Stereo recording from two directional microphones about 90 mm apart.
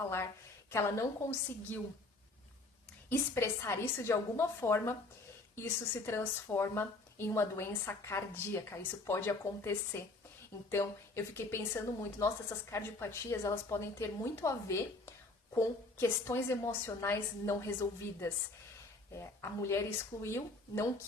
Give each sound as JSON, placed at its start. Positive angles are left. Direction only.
{"t": 0.7, "sound": "a woman's voice", "side_deg": 30}
{"t": 3.1, "sound": "a woman's voice", "side_deg": 25}
{"t": 6.1, "sound": "a woman's voice", "side_deg": 30}